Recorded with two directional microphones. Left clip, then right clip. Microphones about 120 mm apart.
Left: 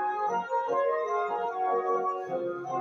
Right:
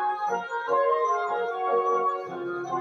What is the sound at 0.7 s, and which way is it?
Music, 20° right (ahead or behind).